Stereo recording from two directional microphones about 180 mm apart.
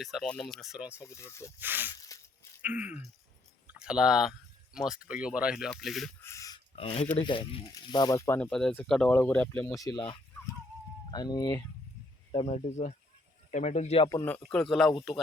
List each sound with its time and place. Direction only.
0.0 s speech: centre (ahead or behind)
1.0 s speech: 15° left (ahead or behind)
1.5 s a sound: 10° right (ahead or behind)
1.9 s a sound: 20° left (ahead or behind)
2.6 s a sound: 10° right (ahead or behind)
3.7 s speech: 5° right (ahead or behind)
6.2 s a sound: 15° left (ahead or behind)
6.7 s speech: 30° left (ahead or behind); by 8.4 s 15° left (ahead or behind)
8.4 s speech: 5° left (ahead or behind)
9.8 s speech: 25° left (ahead or behind)
12.3 s speech: 35° left (ahead or behind)
14.1 s speech: 15° left (ahead or behind)